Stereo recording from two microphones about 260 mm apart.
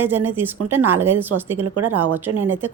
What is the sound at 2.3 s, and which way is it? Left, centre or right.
Speech, right.